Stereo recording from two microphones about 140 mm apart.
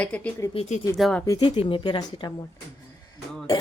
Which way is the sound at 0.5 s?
50° left (ahead or behind).